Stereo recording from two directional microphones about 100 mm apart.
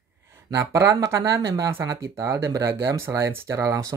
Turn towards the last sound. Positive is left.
turn(degrees=-35)  # may be behind; listen again after turning